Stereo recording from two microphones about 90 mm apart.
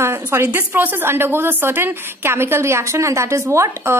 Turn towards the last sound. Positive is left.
turn(degrees=-30)  # may be behind; listen again after turning